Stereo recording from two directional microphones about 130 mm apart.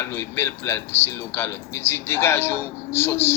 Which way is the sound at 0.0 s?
20° left (ahead or behind).